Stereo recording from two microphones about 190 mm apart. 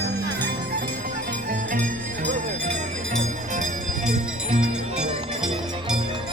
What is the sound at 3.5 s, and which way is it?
Music, 40° right (ahead or behind).